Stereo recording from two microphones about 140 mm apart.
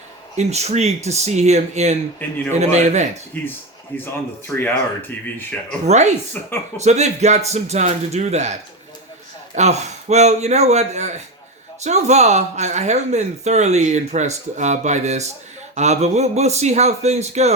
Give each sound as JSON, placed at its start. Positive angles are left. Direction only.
{"t": 0.3, "sound": "speech", "side_deg": -50}
{"t": 3.3, "sound": "speech", "side_deg": 15}
{"t": 5.8, "sound": "speech", "side_deg": -55}
{"t": 6.4, "sound": "speech", "side_deg": 10}
{"t": 6.7, "sound": "speech", "side_deg": -55}
{"t": 9.6, "sound": "speech", "side_deg": -55}